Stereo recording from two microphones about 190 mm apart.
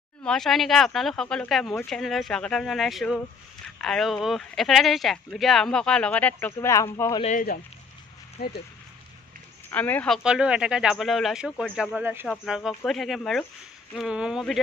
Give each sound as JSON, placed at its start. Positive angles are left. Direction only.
{"t": 0.2, "sound": "speech", "side_deg": 5}
{"t": 7.2, "sound": "speech", "side_deg": 40}
{"t": 8.4, "sound": "speech", "side_deg": 55}
{"t": 9.7, "sound": "speech", "side_deg": 10}